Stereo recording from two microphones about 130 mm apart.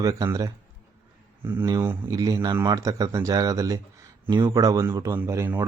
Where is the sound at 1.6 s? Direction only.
25° right (ahead or behind).